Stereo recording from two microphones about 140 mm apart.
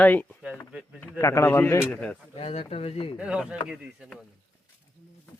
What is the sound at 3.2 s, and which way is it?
Speech, 10° right (ahead or behind).